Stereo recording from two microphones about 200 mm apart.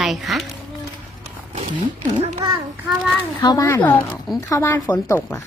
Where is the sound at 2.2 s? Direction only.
25° right (ahead or behind).